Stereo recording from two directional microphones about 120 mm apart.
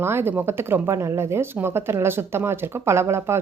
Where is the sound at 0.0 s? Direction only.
20° right (ahead or behind).